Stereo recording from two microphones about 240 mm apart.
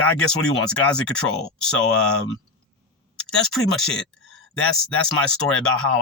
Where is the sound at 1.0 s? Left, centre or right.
Centre.